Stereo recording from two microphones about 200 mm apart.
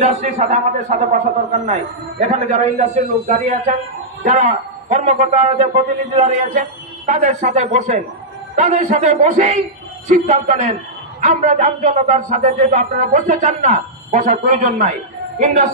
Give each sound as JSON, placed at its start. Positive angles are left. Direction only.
{"t": 0.0, "sound": "a man's voice", "side_deg": -35}